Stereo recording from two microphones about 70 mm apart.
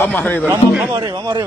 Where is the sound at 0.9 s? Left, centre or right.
Right.